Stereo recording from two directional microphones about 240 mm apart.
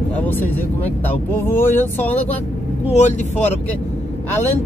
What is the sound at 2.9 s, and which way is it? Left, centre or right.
Speech, left.